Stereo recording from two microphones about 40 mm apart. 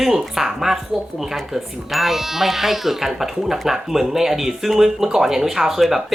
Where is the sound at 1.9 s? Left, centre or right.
Centre.